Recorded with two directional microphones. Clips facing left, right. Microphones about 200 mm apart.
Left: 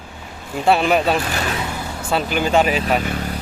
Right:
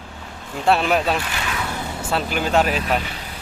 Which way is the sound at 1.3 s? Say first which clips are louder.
Left 4 dB; 40° left (ahead or behind).